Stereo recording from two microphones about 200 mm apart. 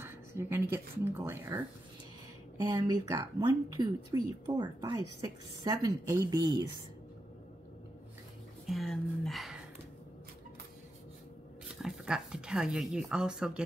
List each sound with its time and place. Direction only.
0.0 s speech: 10° right (ahead or behind)
8.6 s speech: centre (ahead or behind)
11.8 s speech: 5° right (ahead or behind)